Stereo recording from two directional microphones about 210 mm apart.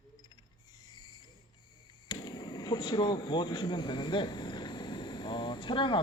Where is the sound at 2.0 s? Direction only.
20° left (ahead or behind).